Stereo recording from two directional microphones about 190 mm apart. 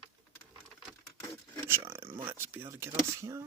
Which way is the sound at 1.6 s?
10° right (ahead or behind).